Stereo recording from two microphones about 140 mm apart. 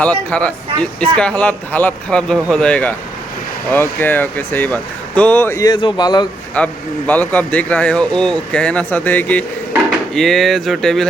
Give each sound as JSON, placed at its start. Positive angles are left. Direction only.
{"t": 0.0, "sound": "speech", "side_deg": 10}
{"t": 5.6, "sound": "speech", "side_deg": 30}
{"t": 6.6, "sound": "speech", "side_deg": 10}